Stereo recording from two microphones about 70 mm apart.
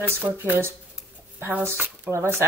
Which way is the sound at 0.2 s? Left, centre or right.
Right.